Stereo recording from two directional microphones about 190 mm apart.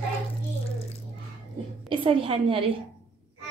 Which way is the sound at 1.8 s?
25° right (ahead or behind).